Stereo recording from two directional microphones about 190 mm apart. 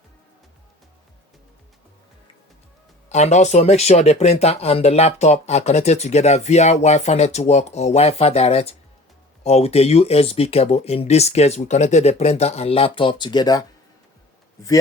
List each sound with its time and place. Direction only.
3.1 s speech: 35° left (ahead or behind); by 14.7 s 15° left (ahead or behind)